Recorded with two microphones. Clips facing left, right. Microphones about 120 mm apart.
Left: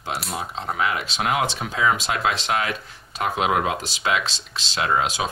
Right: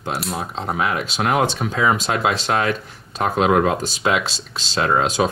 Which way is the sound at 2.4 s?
35° right (ahead or behind).